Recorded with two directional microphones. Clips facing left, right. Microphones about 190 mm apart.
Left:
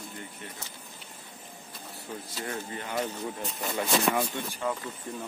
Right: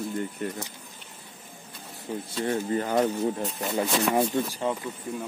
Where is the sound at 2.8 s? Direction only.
40° right (ahead or behind).